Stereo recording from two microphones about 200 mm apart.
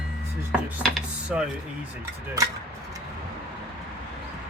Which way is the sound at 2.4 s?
15° right (ahead or behind).